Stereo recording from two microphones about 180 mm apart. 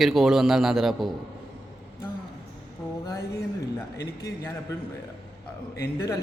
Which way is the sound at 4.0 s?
15° left (ahead or behind).